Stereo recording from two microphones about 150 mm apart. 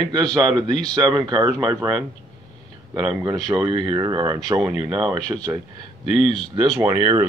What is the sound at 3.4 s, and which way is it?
Speech, 30° right (ahead or behind).